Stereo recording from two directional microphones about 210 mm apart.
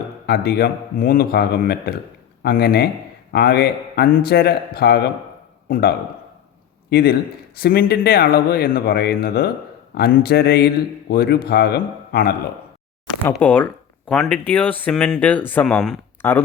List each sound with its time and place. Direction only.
0.3 s a man's voice: 50° left (ahead or behind)
6.9 s speech: 45° left (ahead or behind)
13.2 s speech: 5° left (ahead or behind)